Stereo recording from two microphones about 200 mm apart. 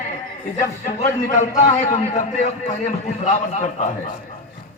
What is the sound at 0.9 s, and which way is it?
A man's voice, 35° left (ahead or behind).